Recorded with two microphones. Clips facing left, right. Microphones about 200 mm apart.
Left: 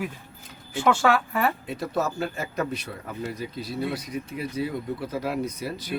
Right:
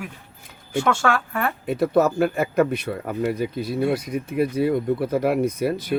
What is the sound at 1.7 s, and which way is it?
A man's voice, 55° right (ahead or behind).